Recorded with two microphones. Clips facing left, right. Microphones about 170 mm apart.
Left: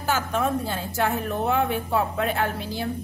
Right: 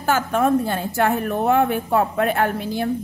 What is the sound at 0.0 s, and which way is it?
A woman's voice, 50° right (ahead or behind).